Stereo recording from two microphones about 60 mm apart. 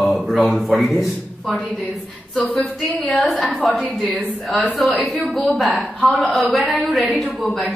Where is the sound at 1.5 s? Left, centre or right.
Centre.